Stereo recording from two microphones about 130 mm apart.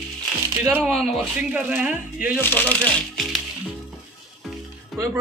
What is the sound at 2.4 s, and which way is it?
Speech, 15° left (ahead or behind).